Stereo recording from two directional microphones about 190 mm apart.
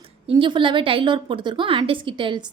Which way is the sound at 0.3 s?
25° right (ahead or behind).